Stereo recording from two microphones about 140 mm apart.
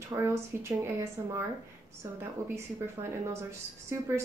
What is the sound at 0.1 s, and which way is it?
Speech, 20° right (ahead or behind).